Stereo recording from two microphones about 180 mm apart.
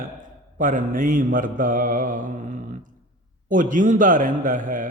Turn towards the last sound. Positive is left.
turn(degrees=-45)  # may be behind; listen again after turning